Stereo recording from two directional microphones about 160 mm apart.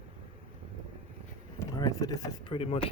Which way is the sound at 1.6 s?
25° left (ahead or behind).